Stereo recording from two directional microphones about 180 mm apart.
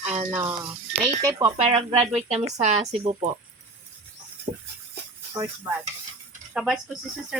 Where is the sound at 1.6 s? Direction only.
30° right (ahead or behind).